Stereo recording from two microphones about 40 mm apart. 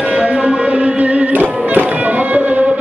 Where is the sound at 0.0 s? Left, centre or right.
Right.